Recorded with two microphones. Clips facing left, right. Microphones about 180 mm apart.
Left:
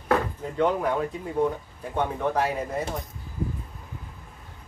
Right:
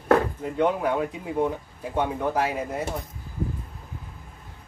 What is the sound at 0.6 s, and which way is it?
Speech, 5° right (ahead or behind).